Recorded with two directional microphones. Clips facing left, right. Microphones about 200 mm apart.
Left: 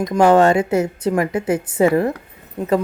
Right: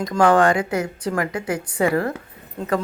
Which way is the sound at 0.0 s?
20° left (ahead or behind).